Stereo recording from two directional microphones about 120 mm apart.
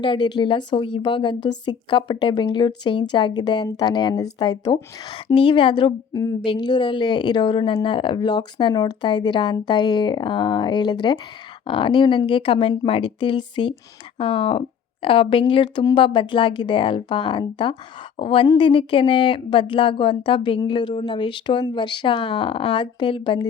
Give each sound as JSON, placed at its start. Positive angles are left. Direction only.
{"t": 0.0, "sound": "a woman's voice", "side_deg": 40}